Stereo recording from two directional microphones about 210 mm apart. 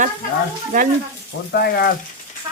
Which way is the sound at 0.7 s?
40° right (ahead or behind).